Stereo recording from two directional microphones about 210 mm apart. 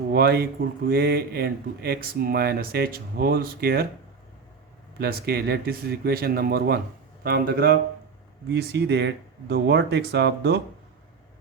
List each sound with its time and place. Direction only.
0.1 s speech: 50° right (ahead or behind)
4.9 s speech: 50° right (ahead or behind)